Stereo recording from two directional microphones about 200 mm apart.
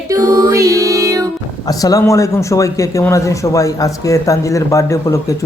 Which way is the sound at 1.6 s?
20° left (ahead or behind).